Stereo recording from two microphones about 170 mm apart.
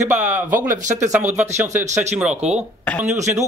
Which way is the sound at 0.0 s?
45° right (ahead or behind).